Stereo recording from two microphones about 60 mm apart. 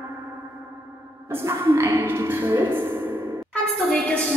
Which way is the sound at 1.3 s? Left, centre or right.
Right.